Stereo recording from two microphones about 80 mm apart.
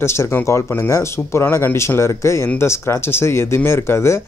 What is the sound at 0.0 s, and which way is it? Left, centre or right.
Speech, left.